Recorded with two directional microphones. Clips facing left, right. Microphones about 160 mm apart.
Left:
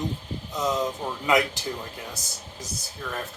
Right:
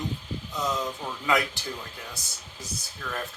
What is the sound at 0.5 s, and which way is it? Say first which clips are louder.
Speech: left 4 dB; 20° left (ahead or behind).